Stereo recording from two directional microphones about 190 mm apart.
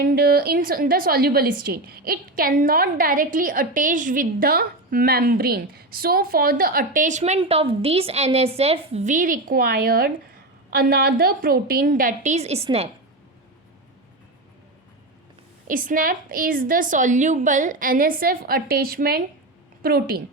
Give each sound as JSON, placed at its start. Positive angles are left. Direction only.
{"t": 0.0, "sound": "a woman's voice", "side_deg": -50}
{"t": 15.6, "sound": "a woman's voice", "side_deg": -45}